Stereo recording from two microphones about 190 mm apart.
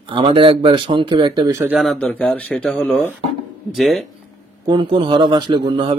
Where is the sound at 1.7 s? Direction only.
Centre (ahead or behind).